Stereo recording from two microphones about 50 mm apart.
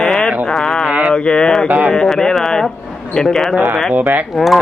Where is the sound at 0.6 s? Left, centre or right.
Centre.